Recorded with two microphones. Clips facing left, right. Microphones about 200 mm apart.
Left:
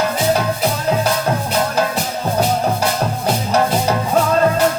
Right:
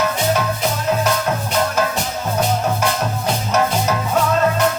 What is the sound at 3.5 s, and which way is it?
Music, 35° left (ahead or behind).